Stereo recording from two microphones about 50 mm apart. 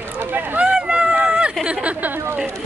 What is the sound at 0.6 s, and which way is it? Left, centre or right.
Run, centre.